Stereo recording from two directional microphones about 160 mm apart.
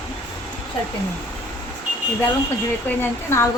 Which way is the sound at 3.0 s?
15° left (ahead or behind).